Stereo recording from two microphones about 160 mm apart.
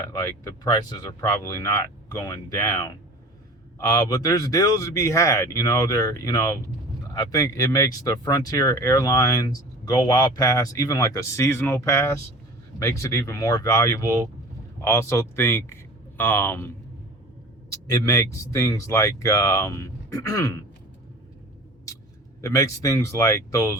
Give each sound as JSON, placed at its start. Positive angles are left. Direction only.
{"t": 0.0, "sound": "speech", "side_deg": 20}
{"t": 22.4, "sound": "speech", "side_deg": 20}